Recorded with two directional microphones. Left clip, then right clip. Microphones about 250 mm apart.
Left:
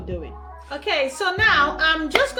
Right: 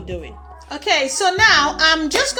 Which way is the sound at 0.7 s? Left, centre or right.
Right.